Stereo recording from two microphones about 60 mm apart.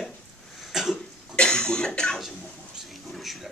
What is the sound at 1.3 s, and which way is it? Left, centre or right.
Cough, centre.